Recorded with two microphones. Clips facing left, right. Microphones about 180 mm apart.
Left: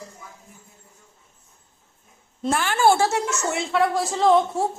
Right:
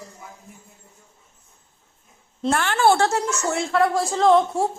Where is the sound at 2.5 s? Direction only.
5° left (ahead or behind).